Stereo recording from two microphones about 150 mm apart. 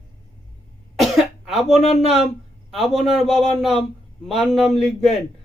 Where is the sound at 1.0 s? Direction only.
Centre (ahead or behind).